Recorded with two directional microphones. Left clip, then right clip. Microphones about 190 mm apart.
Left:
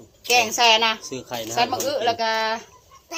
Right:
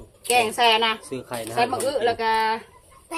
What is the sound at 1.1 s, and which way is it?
Speech, centre (ahead or behind).